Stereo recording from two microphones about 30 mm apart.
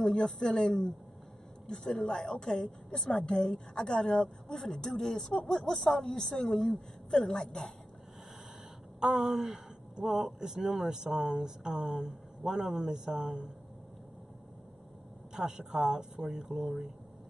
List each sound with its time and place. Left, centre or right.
0.0 s a woman's voice: left
9.0 s a sound: centre
9.9 s speech: centre
10.9 s a sound: centre
11.1 s speech: right
15.3 s speech: right